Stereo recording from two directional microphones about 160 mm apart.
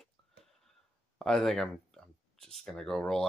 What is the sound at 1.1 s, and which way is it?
Speech, centre (ahead or behind).